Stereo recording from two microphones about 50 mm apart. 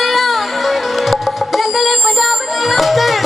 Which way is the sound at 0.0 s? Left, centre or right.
Centre.